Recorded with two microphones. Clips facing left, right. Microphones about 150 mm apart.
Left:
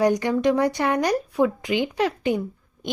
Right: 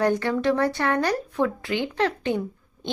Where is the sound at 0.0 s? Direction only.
15° left (ahead or behind).